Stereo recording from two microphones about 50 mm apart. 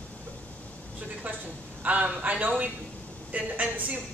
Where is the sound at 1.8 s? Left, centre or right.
Right.